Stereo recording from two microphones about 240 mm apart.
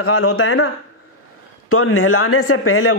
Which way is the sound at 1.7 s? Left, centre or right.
Left.